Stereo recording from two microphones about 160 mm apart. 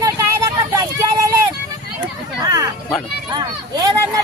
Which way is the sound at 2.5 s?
25° right (ahead or behind).